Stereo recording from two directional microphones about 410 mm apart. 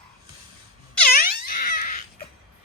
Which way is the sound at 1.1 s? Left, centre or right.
Left.